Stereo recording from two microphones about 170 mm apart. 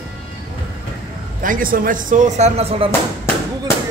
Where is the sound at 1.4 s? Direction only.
55° right (ahead or behind); by 2.9 s 35° right (ahead or behind).